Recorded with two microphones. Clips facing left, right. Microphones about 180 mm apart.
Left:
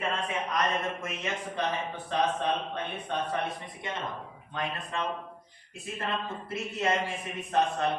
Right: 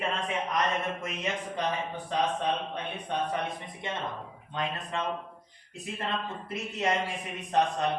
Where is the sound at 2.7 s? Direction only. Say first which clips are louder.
Even; 15° right (ahead or behind).